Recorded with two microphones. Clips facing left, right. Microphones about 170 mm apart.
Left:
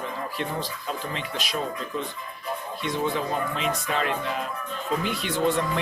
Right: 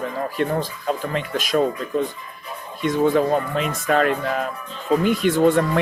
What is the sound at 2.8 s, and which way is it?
Speech, 45° right (ahead or behind).